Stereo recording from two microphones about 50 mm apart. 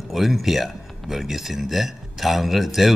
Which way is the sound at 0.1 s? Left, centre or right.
Centre.